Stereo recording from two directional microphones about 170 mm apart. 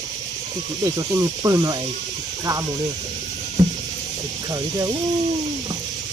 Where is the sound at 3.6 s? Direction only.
25° right (ahead or behind).